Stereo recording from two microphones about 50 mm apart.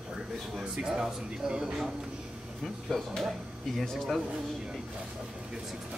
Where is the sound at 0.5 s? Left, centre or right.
Centre.